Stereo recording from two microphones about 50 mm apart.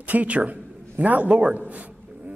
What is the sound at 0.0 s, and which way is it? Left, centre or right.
A man's voice, right.